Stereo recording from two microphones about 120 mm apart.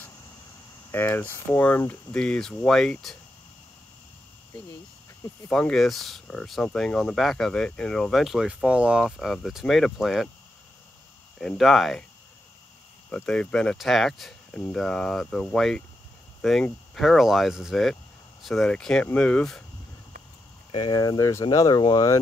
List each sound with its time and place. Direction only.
0.9 s speech: 15° left (ahead or behind)
5.5 s speech: 5° left (ahead or behind)
11.3 s speech: centre (ahead or behind)
13.1 s speech: 10° left (ahead or behind)
16.3 s a sound: 5° left (ahead or behind)
16.9 s speech: centre (ahead or behind)
20.7 s speech: 40° left (ahead or behind)